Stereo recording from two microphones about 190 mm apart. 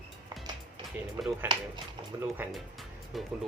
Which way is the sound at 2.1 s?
20° right (ahead or behind).